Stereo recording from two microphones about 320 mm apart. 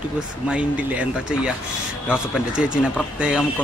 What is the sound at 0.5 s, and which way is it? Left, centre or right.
A man's voice, centre.